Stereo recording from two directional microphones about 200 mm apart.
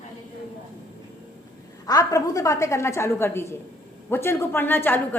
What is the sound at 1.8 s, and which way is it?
A woman's voice, 15° left (ahead or behind).